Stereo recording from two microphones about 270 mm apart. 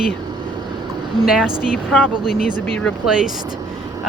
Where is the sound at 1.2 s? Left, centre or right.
Centre.